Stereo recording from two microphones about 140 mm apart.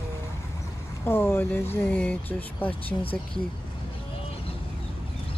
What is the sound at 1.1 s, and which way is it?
Speech, 15° left (ahead or behind).